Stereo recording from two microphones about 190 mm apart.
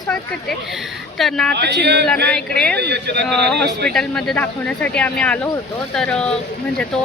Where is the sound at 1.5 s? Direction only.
65° right (ahead or behind).